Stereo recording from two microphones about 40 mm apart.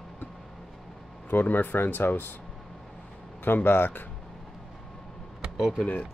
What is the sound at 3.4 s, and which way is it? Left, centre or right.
Speech, left.